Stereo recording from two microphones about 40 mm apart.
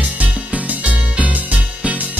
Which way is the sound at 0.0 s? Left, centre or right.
Right.